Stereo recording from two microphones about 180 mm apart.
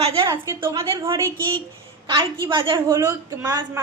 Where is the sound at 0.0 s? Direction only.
30° right (ahead or behind).